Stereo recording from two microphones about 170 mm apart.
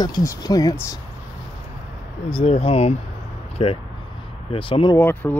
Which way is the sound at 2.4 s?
40° left (ahead or behind).